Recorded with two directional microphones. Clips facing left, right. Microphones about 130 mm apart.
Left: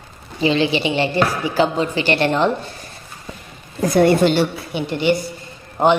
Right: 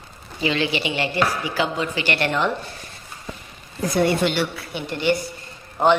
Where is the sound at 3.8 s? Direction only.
45° left (ahead or behind).